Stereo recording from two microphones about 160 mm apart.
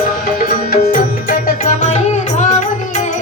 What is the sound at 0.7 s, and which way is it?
Music, 65° left (ahead or behind).